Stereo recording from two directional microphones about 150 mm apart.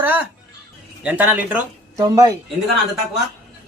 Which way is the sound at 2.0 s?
25° right (ahead or behind).